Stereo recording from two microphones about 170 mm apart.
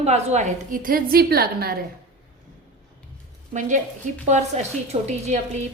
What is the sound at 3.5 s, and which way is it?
A woman's voice, 45° right (ahead or behind).